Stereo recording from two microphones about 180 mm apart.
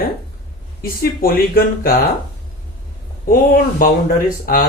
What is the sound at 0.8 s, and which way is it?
Speech, 55° left (ahead or behind).